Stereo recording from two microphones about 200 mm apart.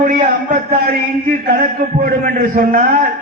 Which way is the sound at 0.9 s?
45° right (ahead or behind).